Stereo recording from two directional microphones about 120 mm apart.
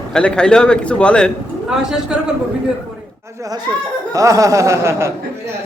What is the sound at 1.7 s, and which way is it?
Speech, 5° right (ahead or behind).